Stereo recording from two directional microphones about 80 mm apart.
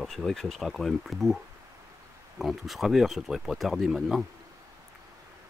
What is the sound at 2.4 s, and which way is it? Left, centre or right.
Speech, centre.